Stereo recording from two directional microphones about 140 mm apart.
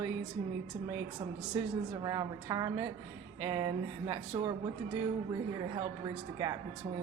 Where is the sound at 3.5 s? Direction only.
35° right (ahead or behind).